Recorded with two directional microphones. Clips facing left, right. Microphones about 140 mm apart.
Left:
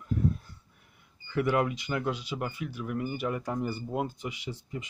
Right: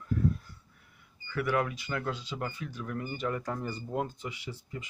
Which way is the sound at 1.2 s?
20° left (ahead or behind).